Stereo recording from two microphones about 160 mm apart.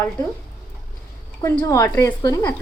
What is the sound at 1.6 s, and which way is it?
Speech, 20° left (ahead or behind).